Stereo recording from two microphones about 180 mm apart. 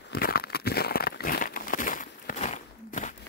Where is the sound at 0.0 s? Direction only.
60° left (ahead or behind).